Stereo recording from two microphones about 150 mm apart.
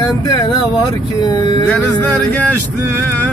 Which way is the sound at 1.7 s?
10° left (ahead or behind).